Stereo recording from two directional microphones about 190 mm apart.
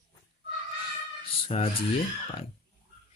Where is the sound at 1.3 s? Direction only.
30° left (ahead or behind).